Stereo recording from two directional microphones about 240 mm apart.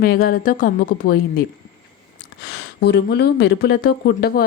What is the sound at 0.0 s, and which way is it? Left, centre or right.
A woman's voice, left.